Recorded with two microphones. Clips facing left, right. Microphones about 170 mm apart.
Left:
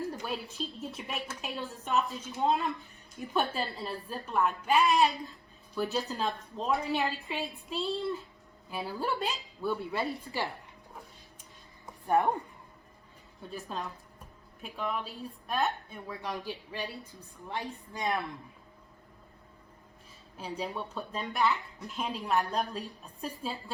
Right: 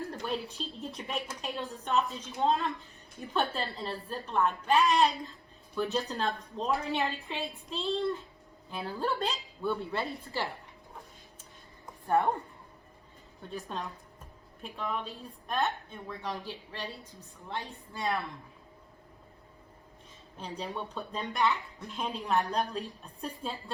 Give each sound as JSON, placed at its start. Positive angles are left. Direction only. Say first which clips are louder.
{"t": 0.2, "sound": "a woman's voice", "louder": "right 1 dB", "side_deg": 5}
{"t": 12.0, "sound": "a woman's voice", "louder": "left 1 dB", "side_deg": 15}
{"t": 13.5, "sound": "a woman's voice", "louder": "even", "side_deg": 0}
{"t": 20.3, "sound": "a woman's voice", "louder": "left 1 dB", "side_deg": 5}